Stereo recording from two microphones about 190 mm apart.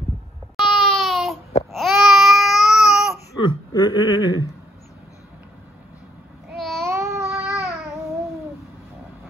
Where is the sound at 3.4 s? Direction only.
25° left (ahead or behind).